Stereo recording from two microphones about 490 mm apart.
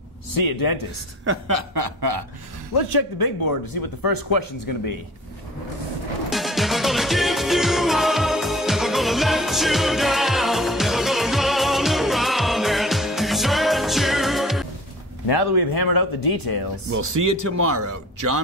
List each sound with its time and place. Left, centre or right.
0.3 s speech: left
1.2 s speech: right
2.0 s speech: right
2.7 s speech: left
6.3 s music: centre
15.2 s speech: left
16.9 s speech: right